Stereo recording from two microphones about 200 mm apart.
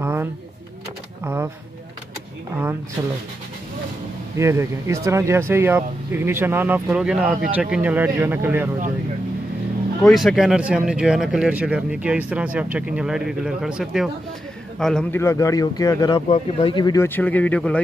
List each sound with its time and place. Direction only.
0.0 s a sound: 10° right (ahead or behind)
4.4 s speech: 15° right (ahead or behind)
10.0 s speech: centre (ahead or behind); by 16.2 s 15° left (ahead or behind)
16.3 s speech: 30° left (ahead or behind); by 17.7 s 5° left (ahead or behind)